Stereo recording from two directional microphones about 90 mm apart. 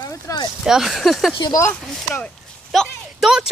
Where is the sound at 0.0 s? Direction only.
45° left (ahead or behind).